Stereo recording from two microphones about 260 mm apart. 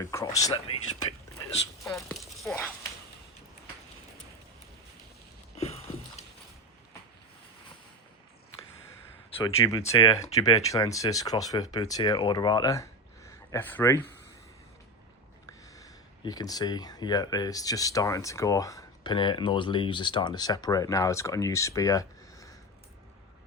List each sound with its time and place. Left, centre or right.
0.0 s speech: centre
2.1 s speech: centre
9.4 s speech: centre
15.4 s speech: centre